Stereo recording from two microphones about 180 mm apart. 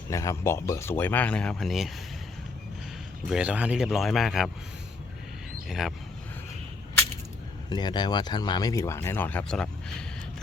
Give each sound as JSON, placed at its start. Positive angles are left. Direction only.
{"t": 0.1, "sound": "speech", "side_deg": 15}
{"t": 3.2, "sound": "speech", "side_deg": -5}
{"t": 5.6, "sound": "speech", "side_deg": 0}
{"t": 7.7, "sound": "speech", "side_deg": 25}